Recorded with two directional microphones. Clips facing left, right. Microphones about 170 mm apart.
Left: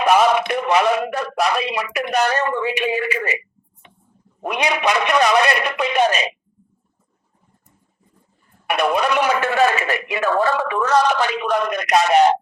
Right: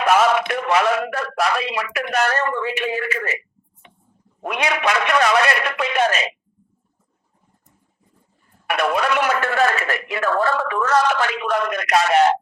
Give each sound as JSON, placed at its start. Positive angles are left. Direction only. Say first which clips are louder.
{"t": 0.0, "sound": "speech", "louder": "left 1 dB", "side_deg": 15}
{"t": 4.4, "sound": "speech", "louder": "left 1 dB", "side_deg": 20}
{"t": 8.6, "sound": "speech", "louder": "left 1 dB", "side_deg": 15}